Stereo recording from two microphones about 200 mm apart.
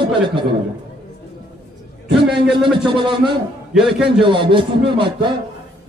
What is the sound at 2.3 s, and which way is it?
Speech, centre (ahead or behind).